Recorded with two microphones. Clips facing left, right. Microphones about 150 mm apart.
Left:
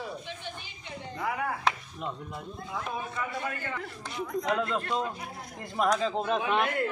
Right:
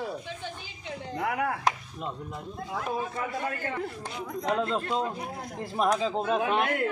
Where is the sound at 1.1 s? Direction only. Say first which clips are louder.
Right 3 dB; 65° right (ahead or behind).